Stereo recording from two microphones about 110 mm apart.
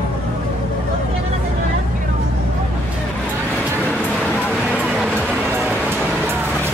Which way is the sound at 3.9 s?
15° left (ahead or behind).